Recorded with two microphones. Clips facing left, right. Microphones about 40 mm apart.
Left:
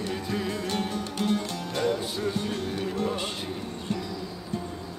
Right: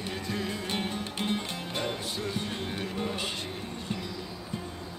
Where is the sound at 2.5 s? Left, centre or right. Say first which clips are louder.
Left 4 dB; centre.